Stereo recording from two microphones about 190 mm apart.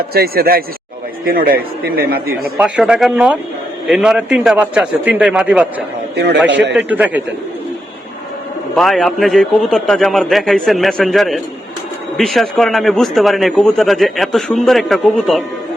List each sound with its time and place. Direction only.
0.1 s a man's voice: 55° right (ahead or behind)
2.6 s a man's voice: 5° right (ahead or behind)
6.5 s a man's voice: 70° right (ahead or behind)
6.7 s a man's voice: 10° right (ahead or behind)
8.7 s a man's voice: centre (ahead or behind)